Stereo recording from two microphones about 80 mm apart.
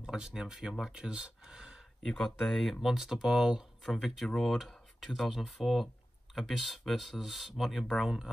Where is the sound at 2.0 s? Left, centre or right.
Centre.